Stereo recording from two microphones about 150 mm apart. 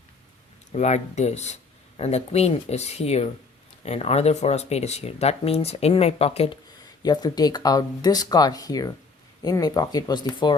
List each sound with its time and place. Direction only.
0.7 s speech: 50° left (ahead or behind)
7.0 s speech: 25° left (ahead or behind)